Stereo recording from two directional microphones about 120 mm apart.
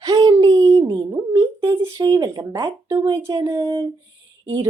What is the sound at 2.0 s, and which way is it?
Speech, 30° right (ahead or behind).